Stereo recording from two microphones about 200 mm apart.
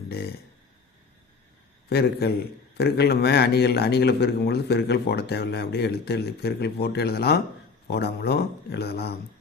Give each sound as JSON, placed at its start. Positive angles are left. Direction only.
{"t": 1.9, "sound": "a man's voice", "side_deg": 50}